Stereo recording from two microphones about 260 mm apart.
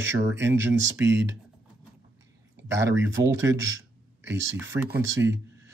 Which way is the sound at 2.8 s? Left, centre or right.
Right.